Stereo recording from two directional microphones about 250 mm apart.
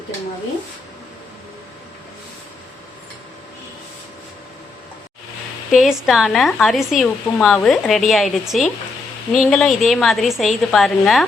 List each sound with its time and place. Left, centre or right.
5.7 s speech: centre